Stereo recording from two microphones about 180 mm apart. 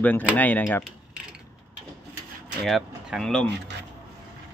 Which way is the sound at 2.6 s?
Centre (ahead or behind).